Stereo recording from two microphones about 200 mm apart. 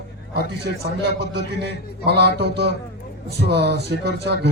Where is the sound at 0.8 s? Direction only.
55° right (ahead or behind).